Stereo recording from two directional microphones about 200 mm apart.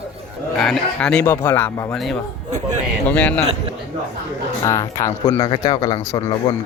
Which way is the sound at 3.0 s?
5° left (ahead or behind).